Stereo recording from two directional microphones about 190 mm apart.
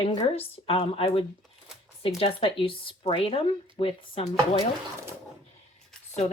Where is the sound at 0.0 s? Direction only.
30° left (ahead or behind).